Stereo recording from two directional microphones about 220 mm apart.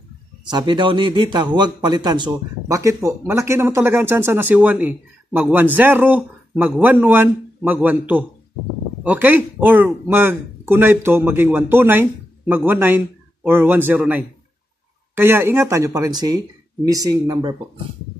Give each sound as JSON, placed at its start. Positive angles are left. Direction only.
{"t": 0.5, "sound": "speech", "side_deg": -20}
{"t": 9.0, "sound": "speech", "side_deg": -5}